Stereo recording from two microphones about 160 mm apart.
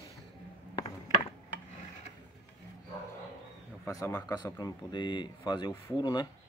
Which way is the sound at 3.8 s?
20° left (ahead or behind).